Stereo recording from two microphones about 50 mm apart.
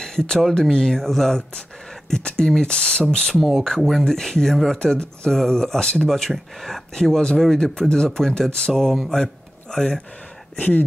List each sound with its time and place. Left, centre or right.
0.0 s a sound: centre
0.6 s speech: centre
3.3 s speech: centre
3.6 s speech: centre